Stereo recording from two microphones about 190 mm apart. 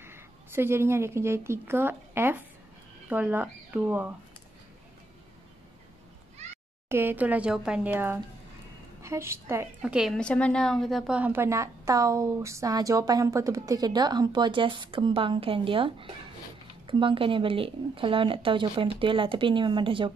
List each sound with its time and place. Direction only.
0.0 s a woman's voice: 10° right (ahead or behind)
6.9 s a woman's voice: 10° right (ahead or behind)
9.8 s a woman's voice: 5° right (ahead or behind); by 20.1 s 25° right (ahead or behind)